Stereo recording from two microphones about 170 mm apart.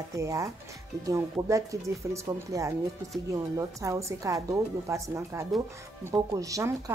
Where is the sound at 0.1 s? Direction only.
20° right (ahead or behind).